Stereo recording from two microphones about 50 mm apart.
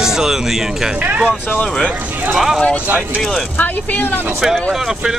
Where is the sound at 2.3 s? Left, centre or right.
Centre.